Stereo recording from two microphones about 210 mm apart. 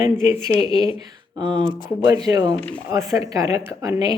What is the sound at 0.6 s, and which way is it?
Speech, 25° left (ahead or behind).